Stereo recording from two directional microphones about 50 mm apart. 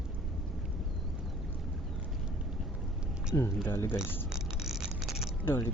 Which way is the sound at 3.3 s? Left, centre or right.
Left.